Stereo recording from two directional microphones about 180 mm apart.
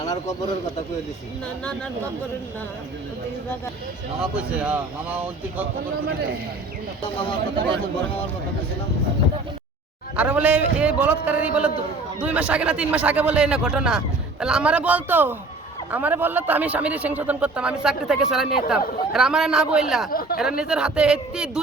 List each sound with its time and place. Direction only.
0.0 s a sound: 20° left (ahead or behind)
4.2 s a man's voice: 5° right (ahead or behind)
7.0 s speech: 30° left (ahead or behind)
10.2 s a man's voice: 5° right (ahead or behind)
20.1 s speech: 55° left (ahead or behind)
20.4 s a man's voice: 5° right (ahead or behind)